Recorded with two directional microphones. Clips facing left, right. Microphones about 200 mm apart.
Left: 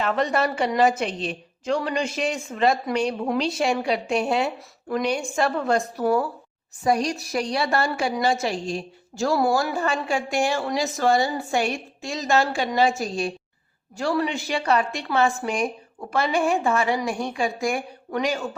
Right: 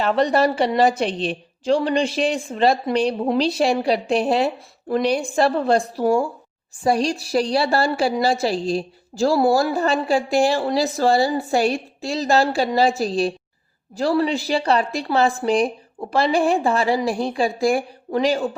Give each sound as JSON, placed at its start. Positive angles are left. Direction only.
{"t": 0.0, "sound": "a woman's voice", "side_deg": -35}